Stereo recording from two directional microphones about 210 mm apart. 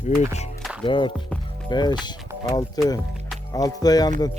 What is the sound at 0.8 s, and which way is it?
Speech, 25° left (ahead or behind).